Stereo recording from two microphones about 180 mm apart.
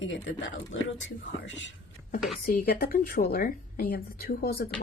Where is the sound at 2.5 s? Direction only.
55° left (ahead or behind).